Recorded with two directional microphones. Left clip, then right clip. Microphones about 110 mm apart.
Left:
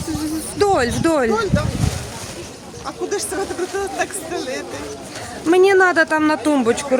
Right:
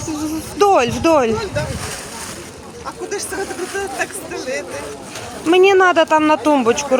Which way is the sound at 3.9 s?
15° left (ahead or behind).